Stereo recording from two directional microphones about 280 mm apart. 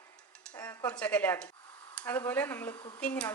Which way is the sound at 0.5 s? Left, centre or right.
Centre.